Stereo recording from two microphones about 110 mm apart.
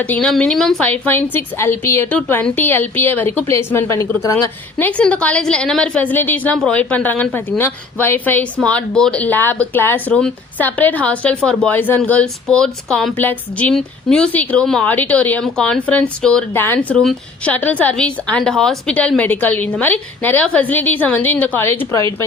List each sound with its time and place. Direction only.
0.0 s a woman's voice: 10° left (ahead or behind)
0.9 s a woman's voice: 15° left (ahead or behind)
4.8 s a woman's voice: 10° left (ahead or behind)
13.1 s a woman's voice: 15° left (ahead or behind)
16.5 s a woman's voice: 20° left (ahead or behind)
17.0 s a woman's voice: 5° left (ahead or behind)
17.5 s a woman's voice: 15° left (ahead or behind)